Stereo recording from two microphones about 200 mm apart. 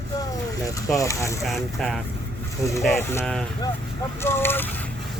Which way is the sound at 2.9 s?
10° left (ahead or behind).